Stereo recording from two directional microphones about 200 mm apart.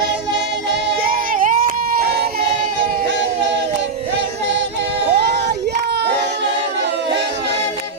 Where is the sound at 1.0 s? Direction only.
45° right (ahead or behind).